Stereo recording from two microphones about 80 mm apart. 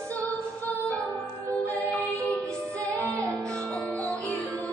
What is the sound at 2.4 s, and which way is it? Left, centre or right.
Music, right.